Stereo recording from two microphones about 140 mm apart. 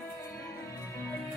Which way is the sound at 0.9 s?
15° left (ahead or behind).